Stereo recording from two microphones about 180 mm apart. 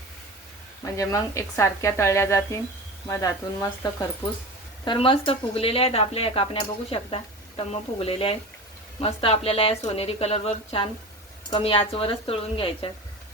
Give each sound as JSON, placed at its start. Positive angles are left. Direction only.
{"t": 0.9, "sound": "a woman's voice", "side_deg": 15}
{"t": 4.9, "sound": "speech", "side_deg": 30}